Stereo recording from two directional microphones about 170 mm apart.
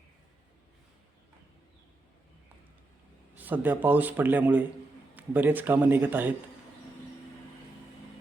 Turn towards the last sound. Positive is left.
turn(degrees=-10)  # may be behind; listen again after turning